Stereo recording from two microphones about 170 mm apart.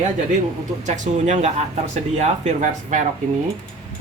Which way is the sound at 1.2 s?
45° right (ahead or behind).